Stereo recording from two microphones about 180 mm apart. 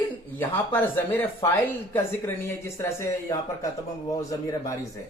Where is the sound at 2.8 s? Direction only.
20° left (ahead or behind).